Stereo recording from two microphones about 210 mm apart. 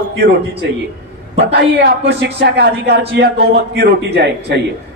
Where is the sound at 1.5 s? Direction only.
45° right (ahead or behind).